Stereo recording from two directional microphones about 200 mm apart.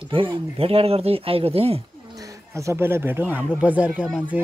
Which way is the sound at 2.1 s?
15° right (ahead or behind).